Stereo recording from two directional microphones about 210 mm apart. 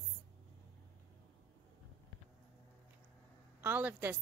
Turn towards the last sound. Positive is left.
turn(degrees=-10)  # may be behind; listen again after turning